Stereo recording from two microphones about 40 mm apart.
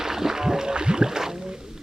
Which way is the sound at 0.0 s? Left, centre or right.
Centre.